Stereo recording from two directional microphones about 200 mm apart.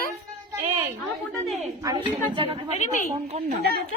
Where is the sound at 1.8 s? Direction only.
15° right (ahead or behind); by 3.6 s 35° right (ahead or behind).